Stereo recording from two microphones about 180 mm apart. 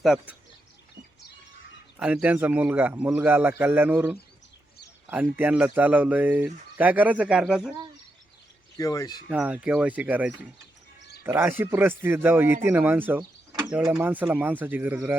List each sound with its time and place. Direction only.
0.0 s speech: 5° right (ahead or behind)
2.0 s speech: 5° right (ahead or behind)
8.8 s speech: 20° left (ahead or behind)
9.3 s speech: 10° right (ahead or behind)